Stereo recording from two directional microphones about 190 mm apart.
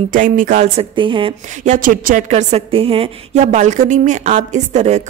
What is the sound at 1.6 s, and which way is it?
Speech, 45° right (ahead or behind).